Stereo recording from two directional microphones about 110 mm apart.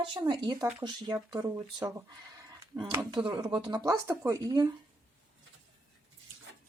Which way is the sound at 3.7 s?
30° right (ahead or behind).